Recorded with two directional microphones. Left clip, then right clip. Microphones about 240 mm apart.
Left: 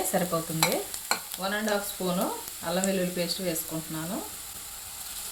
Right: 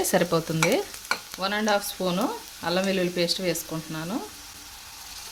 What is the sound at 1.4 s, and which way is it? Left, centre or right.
Frying, right.